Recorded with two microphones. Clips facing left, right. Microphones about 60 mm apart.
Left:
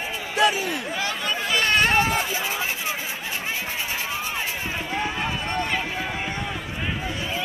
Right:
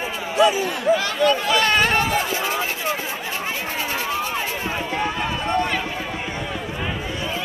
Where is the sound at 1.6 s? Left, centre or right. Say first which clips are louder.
Left 2 dB; right.